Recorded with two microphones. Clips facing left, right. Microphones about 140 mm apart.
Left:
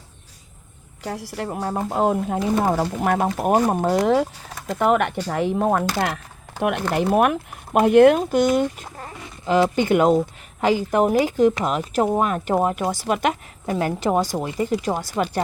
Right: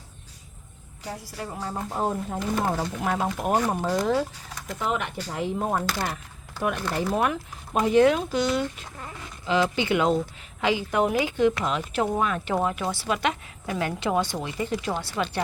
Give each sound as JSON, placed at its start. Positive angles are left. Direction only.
{"t": 1.0, "sound": "speech", "side_deg": 75}
{"t": 1.5, "sound": "speech", "side_deg": 55}
{"t": 3.0, "sound": "speech", "side_deg": 55}
{"t": 3.2, "sound": "speech", "side_deg": 40}
{"t": 4.0, "sound": "speech", "side_deg": 70}
{"t": 4.7, "sound": "speech", "side_deg": 60}
{"t": 5.3, "sound": "speech", "side_deg": 80}
{"t": 6.6, "sound": "a woman's voice", "side_deg": 65}